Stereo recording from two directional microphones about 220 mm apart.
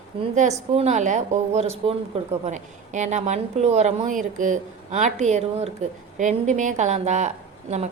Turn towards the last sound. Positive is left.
turn(degrees=-30)  # may be behind; listen again after turning